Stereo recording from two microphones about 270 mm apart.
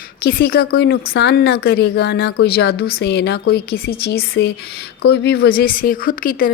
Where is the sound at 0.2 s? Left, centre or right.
Left.